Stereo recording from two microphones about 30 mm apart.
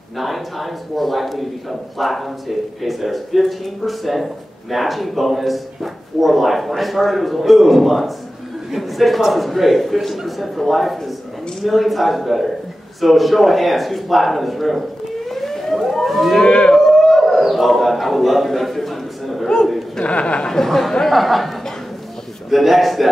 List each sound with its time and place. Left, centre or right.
0.2 s a man's voice: centre
15.3 s siren: centre
16.4 s speech: left
16.8 s a sound: centre
20.0 s speech: left
20.4 s speech: centre
21.0 s a man's voice: centre
22.5 s a man's voice: centre